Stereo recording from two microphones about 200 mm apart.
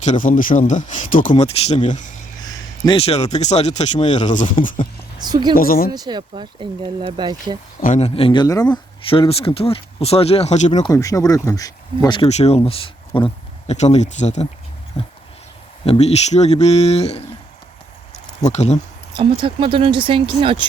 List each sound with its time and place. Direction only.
0.0 s speech: 40° left (ahead or behind)
2.4 s speech: 25° left (ahead or behind); by 4.7 s 40° left (ahead or behind)
5.2 s speech: 20° right (ahead or behind)
5.5 s speech: 45° left (ahead or behind)
5.9 s speech: 20° right (ahead or behind)
7.8 s speech: 35° left (ahead or behind)
10.8 s speech: 15° left (ahead or behind); by 17.2 s 30° left (ahead or behind)
18.4 s speech: 35° left (ahead or behind)
19.1 s speech: 25° right (ahead or behind)